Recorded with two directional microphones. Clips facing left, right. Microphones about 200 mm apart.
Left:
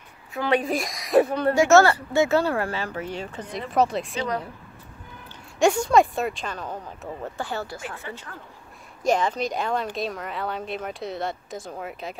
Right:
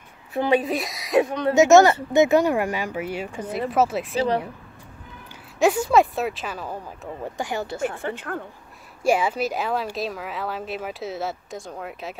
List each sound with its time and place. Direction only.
0.5 s speech: 5° right (ahead or behind)
1.5 s speech: 20° right (ahead or behind); by 4.3 s 5° right (ahead or behind)
5.6 s speech: 5° right (ahead or behind)
8.0 s speech: 55° right (ahead or behind)
9.0 s speech: 10° right (ahead or behind)